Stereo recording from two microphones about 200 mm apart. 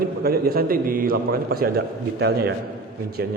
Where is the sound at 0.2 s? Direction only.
50° right (ahead or behind).